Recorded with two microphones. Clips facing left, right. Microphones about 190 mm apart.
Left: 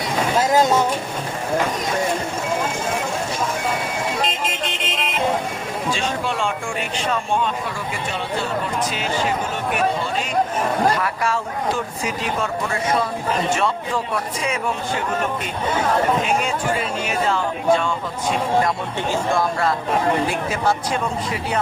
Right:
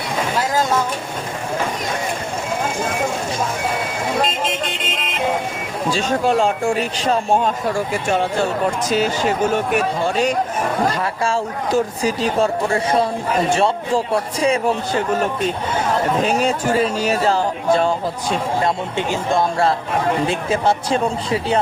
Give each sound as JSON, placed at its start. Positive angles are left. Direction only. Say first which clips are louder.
{"t": 0.3, "sound": "a sound", "louder": "left 3 dB", "side_deg": 20}
{"t": 5.9, "sound": "speech", "louder": "right 8 dB", "side_deg": -40}
{"t": 11.0, "sound": "speech", "louder": "right 2 dB", "side_deg": -30}
{"t": 16.2, "sound": "speech", "louder": "right 3 dB", "side_deg": -35}
{"t": 18.9, "sound": "speech", "louder": "right 1 dB", "side_deg": -20}